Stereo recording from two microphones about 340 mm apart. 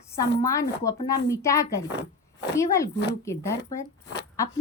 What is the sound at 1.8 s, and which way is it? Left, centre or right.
Speech, left.